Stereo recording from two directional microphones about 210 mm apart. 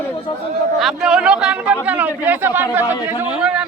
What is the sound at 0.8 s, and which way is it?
Speech, centre (ahead or behind).